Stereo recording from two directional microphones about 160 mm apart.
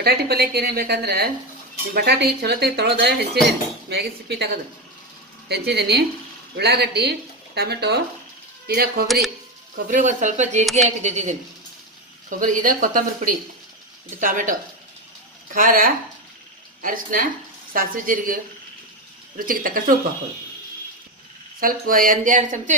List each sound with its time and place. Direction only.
0.0 s a woman's voice: 80° right
8.6 s speech: 75° right (ahead or behind)
9.0 s speech: centre (ahead or behind)
9.8 s speech: 50° right (ahead or behind)
21.5 s speech: 65° right (ahead or behind)